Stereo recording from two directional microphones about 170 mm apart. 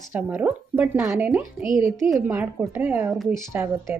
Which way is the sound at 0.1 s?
10° right (ahead or behind).